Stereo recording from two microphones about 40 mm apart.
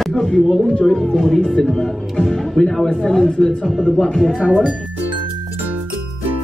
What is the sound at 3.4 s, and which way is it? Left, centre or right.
Speech, centre.